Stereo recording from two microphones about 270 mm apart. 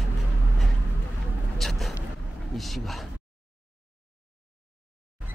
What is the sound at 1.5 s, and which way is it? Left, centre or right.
Vehicle, centre.